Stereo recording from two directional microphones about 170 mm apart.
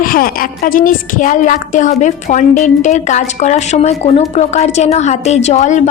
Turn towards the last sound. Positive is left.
turn(degrees=45)  # may be behind; listen again after turning